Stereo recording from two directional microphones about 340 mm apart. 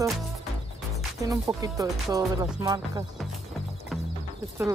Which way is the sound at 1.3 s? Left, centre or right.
Centre.